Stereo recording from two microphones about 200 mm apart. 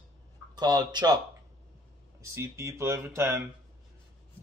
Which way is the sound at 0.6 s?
20° right (ahead or behind).